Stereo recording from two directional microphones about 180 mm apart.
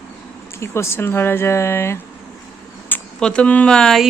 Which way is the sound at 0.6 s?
15° left (ahead or behind).